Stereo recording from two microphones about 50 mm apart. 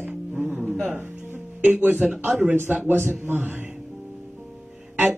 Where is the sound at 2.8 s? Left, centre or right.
Right.